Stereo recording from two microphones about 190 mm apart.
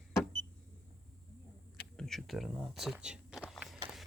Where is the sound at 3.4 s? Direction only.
Centre (ahead or behind).